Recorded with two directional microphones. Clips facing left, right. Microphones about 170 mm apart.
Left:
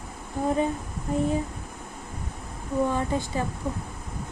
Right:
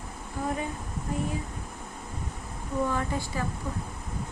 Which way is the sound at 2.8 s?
20° left (ahead or behind).